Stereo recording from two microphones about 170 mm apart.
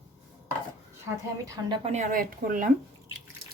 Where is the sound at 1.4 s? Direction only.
20° right (ahead or behind).